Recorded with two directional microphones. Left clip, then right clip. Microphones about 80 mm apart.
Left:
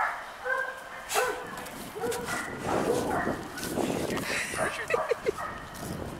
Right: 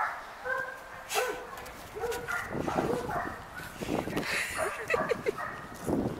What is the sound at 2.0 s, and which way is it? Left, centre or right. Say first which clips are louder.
Dog: left 2 dB; centre.